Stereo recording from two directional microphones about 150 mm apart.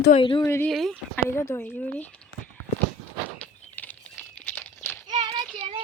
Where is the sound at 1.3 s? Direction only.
15° left (ahead or behind).